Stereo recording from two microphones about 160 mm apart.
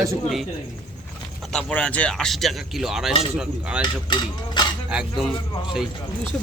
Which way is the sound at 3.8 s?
30° left (ahead or behind).